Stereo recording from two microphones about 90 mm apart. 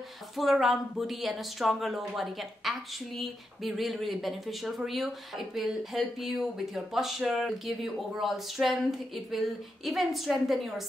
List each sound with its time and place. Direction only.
0.4 s speech: centre (ahead or behind)